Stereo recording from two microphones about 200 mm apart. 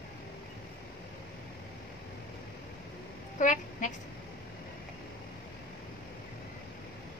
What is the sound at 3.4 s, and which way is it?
Speech, 40° left (ahead or behind).